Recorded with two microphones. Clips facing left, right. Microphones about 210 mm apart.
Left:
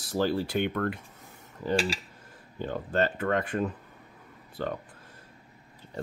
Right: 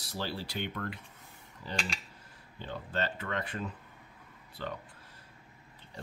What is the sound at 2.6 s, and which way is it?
Speech, 50° left (ahead or behind).